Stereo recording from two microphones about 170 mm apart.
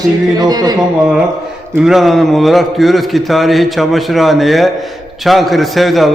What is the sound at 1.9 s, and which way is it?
A man's voice, centre (ahead or behind).